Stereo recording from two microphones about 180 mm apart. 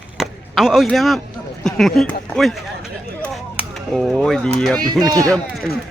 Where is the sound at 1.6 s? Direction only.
Centre (ahead or behind).